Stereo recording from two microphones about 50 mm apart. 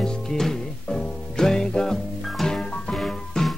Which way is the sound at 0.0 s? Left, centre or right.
Centre.